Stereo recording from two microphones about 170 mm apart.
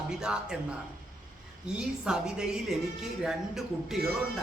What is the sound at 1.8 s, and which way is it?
Speech, 5° right (ahead or behind).